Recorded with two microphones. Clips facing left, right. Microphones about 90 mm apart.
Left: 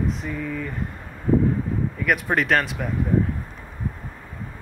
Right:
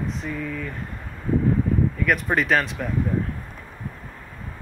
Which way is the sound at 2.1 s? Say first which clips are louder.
Left 2 dB; centre (ahead or behind).